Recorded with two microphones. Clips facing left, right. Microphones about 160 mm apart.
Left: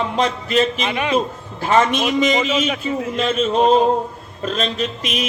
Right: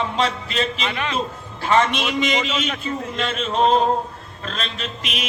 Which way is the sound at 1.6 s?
40° left (ahead or behind).